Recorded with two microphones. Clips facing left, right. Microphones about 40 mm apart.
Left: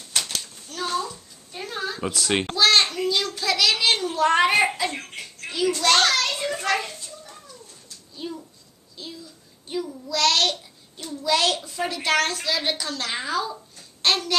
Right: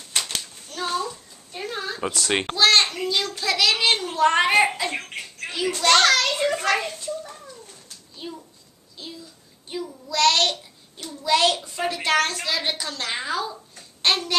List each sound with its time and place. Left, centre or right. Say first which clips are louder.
0.1 s a sound: right 1 dB; centre
2.5 s a child's voice: right 1 dB; centre
6.0 s a child's voice: right 3 dB; right
8.2 s a sound: left 3 dB; centre
9.7 s child singing: left 2 dB; centre
11.2 s a woman's voice: right 2 dB; centre